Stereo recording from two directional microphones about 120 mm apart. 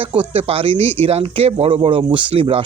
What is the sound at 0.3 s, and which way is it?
Speech, 50° right (ahead or behind).